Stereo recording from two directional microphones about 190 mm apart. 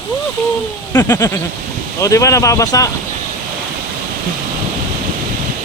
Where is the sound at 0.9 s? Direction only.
15° left (ahead or behind).